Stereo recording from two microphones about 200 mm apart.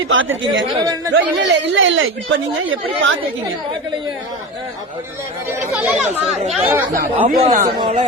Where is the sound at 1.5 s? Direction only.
75° right (ahead or behind).